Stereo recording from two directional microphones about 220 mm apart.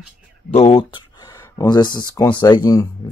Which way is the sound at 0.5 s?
30° left (ahead or behind).